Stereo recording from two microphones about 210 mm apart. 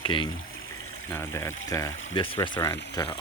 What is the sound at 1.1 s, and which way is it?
Speech, 15° left (ahead or behind).